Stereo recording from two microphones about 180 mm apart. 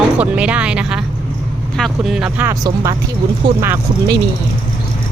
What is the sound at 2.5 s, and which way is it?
Speech, 20° right (ahead or behind).